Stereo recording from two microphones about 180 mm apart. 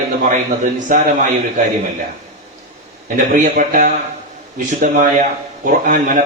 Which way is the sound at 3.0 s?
45° right (ahead or behind).